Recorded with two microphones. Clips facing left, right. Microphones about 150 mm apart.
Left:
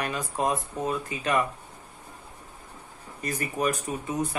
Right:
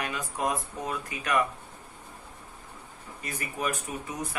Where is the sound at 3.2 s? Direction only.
40° left (ahead or behind).